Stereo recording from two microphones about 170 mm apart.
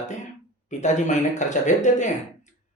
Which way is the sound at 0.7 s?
45° left (ahead or behind).